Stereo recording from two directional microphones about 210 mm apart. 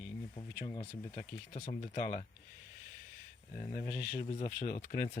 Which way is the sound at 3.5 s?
35° left (ahead or behind).